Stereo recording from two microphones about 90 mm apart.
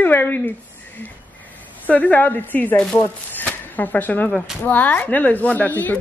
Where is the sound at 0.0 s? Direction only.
20° left (ahead or behind).